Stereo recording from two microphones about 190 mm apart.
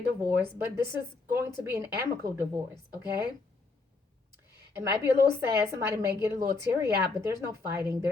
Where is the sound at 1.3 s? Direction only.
15° right (ahead or behind).